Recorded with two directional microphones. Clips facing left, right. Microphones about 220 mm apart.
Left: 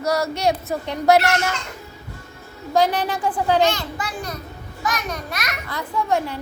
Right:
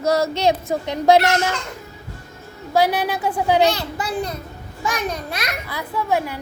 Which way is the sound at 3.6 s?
35° right (ahead or behind).